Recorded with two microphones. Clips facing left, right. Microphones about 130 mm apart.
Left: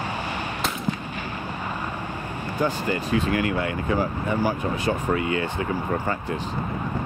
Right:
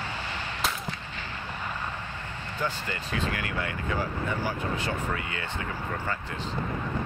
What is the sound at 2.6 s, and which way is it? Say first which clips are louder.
Speech: left 8 dB; 15° left (ahead or behind).